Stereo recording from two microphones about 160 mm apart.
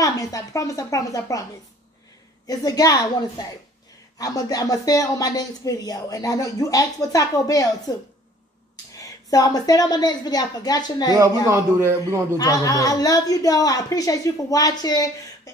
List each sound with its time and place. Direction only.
0.0 s a woman's voice: 20° left (ahead or behind)
2.4 s a woman's voice: 25° left (ahead or behind)
8.9 s a woman's voice: 20° left (ahead or behind)
11.4 s a man's voice: 15° right (ahead or behind)
12.4 s a woman's voice: 20° left (ahead or behind)